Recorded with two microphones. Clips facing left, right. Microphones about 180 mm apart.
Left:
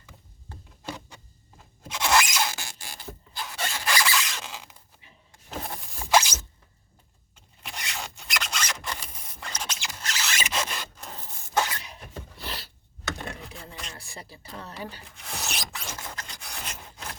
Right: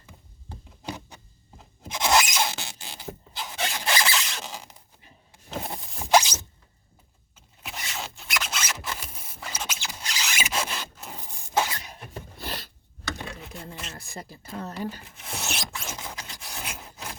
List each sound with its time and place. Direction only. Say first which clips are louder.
1.8 s squeal: right 1 dB; 20° right (ahead or behind)
5.7 s zipper: right 2 dB; 15° right (ahead or behind)
7.3 s zipper: right 1 dB; 5° right (ahead or behind)
11.5 s cough: right 1 dB; 10° right (ahead or behind)
11.8 s a sound: right 1 dB; 45° right (ahead or behind)
13.4 s a sound: right 2 dB; centre (ahead or behind)
13.9 s a sound: right 3 dB; 45° right (ahead or behind)
15.0 s filing: right 2 dB; centre (ahead or behind)
16.1 s rub: right 1 dB; 5° right (ahead or behind)